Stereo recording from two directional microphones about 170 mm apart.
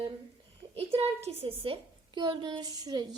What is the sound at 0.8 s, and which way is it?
A woman's voice, 35° right (ahead or behind).